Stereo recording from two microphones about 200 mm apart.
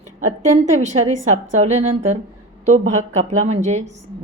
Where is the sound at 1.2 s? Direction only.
35° right (ahead or behind).